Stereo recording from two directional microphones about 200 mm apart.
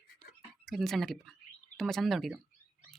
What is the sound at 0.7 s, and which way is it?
Speech, centre (ahead or behind).